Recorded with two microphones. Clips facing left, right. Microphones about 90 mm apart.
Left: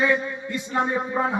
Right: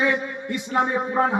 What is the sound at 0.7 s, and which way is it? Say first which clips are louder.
Speech: right 2 dB; 15° right (ahead or behind).